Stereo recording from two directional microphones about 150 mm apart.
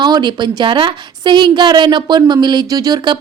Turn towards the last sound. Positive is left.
turn(degrees=-30)  # may be behind; listen again after turning